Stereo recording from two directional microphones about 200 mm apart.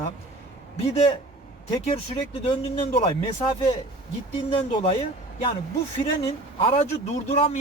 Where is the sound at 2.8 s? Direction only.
30° left (ahead or behind).